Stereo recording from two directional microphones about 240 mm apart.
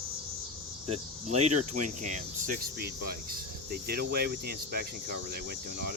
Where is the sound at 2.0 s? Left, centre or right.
Right.